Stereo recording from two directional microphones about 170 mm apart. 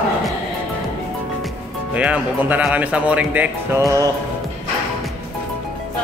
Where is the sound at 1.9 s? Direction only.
10° right (ahead or behind).